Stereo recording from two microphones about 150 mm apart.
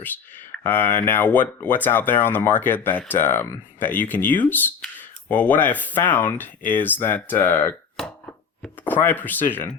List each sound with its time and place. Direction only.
0.5 s speech: 15° left (ahead or behind)